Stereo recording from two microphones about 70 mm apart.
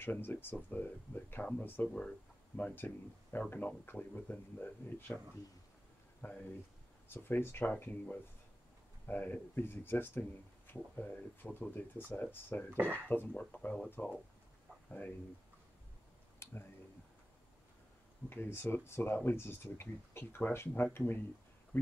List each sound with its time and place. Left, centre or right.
0.0 s speech: left
6.2 s speech: left
12.7 s speech: right
13.3 s speech: centre
16.4 s a sound: left
18.3 s speech: left